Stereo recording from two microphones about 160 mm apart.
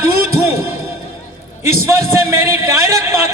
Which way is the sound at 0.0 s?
15° right (ahead or behind).